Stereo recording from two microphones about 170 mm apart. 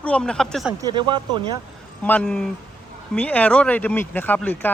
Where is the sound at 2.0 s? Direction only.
5° left (ahead or behind).